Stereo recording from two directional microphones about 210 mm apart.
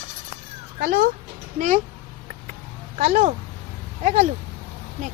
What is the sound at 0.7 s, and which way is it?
Speech, 45° right (ahead or behind).